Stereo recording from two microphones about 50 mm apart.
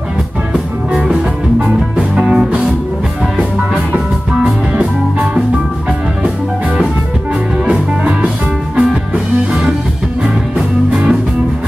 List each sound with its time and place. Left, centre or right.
0.5 s music: right
4.4 s music: right
9.5 s music: right
10.9 s music: right